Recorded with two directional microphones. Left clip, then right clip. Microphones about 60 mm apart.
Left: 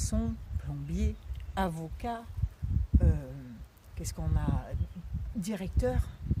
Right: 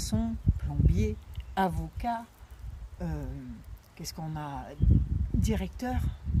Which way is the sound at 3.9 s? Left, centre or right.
Left.